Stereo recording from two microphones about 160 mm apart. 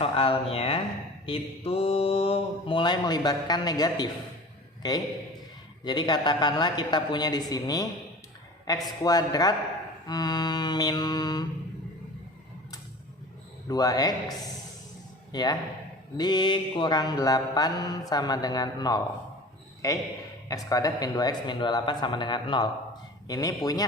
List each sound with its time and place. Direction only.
0.0 s mantra: 35° left (ahead or behind)
4.8 s a man's voice: 25° left (ahead or behind)
5.8 s mantra: 25° left (ahead or behind)
13.7 s mantra: 25° left (ahead or behind)
15.3 s speech: 25° left (ahead or behind)
16.1 s mantra: 25° left (ahead or behind)